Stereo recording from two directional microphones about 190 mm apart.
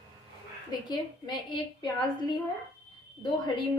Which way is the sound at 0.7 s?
25° left (ahead or behind).